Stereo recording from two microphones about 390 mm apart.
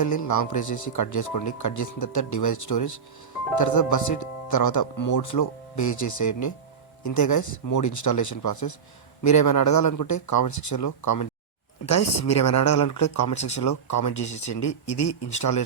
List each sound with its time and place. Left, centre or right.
0.0 s speech: left